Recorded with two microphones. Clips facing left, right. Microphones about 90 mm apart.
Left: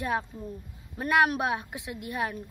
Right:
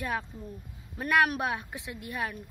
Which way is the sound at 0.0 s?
20° left (ahead or behind).